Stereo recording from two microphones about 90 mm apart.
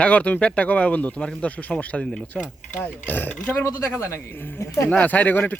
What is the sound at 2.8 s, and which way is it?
Speech, 20° left (ahead or behind).